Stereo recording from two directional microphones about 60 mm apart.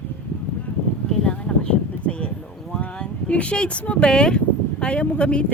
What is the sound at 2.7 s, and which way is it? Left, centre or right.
Speech, centre.